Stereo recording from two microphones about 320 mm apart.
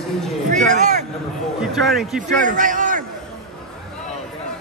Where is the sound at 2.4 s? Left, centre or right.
Right.